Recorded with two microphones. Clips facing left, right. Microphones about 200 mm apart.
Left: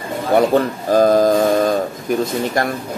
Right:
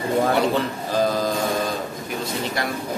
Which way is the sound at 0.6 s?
50° left (ahead or behind).